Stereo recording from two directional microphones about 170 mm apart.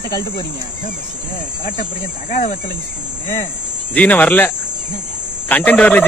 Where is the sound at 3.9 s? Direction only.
10° left (ahead or behind).